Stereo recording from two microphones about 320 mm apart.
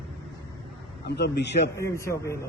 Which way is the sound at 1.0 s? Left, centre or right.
Left.